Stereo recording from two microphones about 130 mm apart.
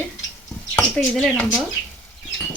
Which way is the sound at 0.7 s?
10° left (ahead or behind).